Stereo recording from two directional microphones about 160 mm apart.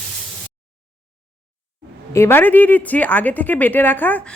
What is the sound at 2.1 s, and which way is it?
Speech, 15° left (ahead or behind).